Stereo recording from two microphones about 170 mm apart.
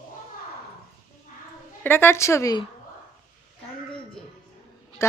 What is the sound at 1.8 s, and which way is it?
Speech, 10° left (ahead or behind).